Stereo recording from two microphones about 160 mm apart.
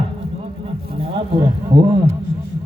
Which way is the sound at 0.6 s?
35° right (ahead or behind).